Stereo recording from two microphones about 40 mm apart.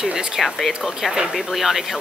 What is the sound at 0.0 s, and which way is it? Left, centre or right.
Speech, right.